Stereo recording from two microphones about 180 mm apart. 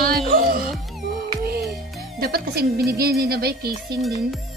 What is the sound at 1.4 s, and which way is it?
Music, 60° right (ahead or behind).